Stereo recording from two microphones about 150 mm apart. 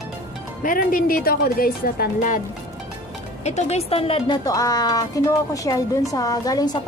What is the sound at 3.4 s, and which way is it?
Speech, 50° left (ahead or behind).